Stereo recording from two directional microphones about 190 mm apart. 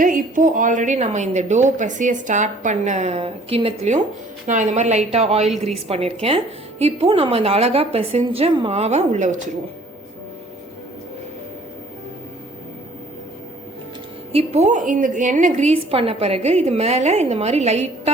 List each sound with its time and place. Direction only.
0.0 s a woman's voice: 45° right (ahead or behind)
14.3 s a woman's voice: 35° right (ahead or behind)